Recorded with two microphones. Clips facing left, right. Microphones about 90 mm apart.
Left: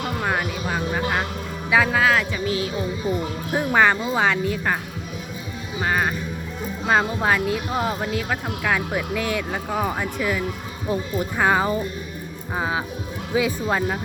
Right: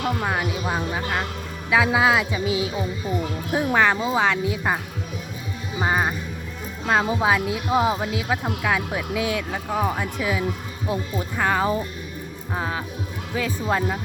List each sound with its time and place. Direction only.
0.2 s speech: centre (ahead or behind)
5.8 s speech: 15° right (ahead or behind)
6.8 s speech: centre (ahead or behind)